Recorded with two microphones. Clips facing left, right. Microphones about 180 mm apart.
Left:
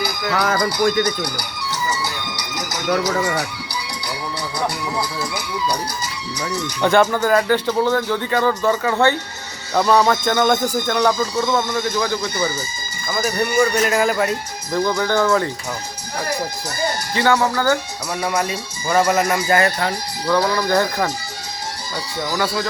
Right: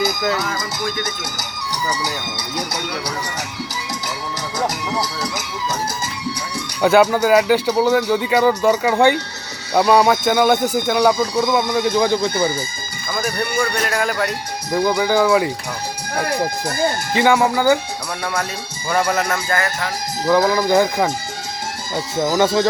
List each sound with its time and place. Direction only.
0.0 s music: 20° right (ahead or behind)
1.0 s speech: 20° right (ahead or behind)
6.8 s speech: 5° right (ahead or behind)
13.1 s speech: 5° left (ahead or behind)
14.7 s speech: 10° right (ahead or behind)
17.2 s speech: 10° right (ahead or behind)
18.9 s speech: 5° left (ahead or behind)
19.5 s speech: 25° left (ahead or behind)
20.2 s speech: 20° right (ahead or behind)
22.4 s speech: 20° right (ahead or behind)